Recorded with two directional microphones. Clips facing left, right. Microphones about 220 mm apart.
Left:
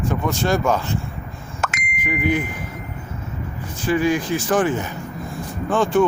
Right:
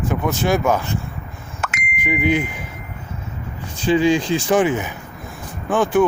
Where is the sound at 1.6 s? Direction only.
40° left (ahead or behind).